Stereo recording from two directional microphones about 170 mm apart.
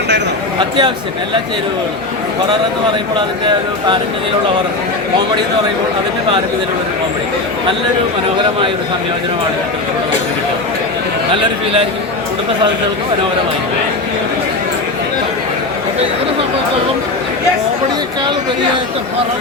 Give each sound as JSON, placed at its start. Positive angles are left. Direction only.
{"t": 0.8, "sound": "speech", "side_deg": -25}